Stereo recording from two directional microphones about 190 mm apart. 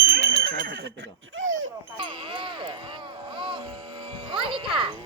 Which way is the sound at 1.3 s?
90° right.